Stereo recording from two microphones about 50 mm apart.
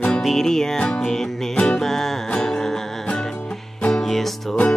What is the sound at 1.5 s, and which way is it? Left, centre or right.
Music, left.